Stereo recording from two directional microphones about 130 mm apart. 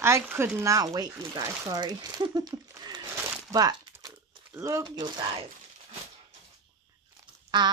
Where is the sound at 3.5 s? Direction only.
30° right (ahead or behind).